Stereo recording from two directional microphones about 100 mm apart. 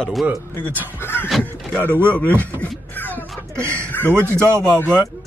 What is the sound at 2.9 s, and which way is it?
Music, 20° left (ahead or behind).